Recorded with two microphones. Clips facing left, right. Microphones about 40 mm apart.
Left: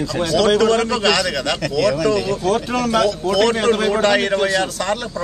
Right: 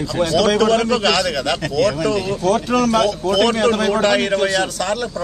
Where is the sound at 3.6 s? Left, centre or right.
Centre.